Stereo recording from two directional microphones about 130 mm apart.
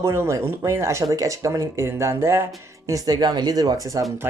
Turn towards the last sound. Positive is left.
turn(degrees=-25)  # may be behind; listen again after turning